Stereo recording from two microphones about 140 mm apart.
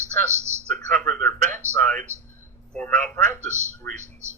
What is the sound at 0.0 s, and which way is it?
Speech, 20° right (ahead or behind).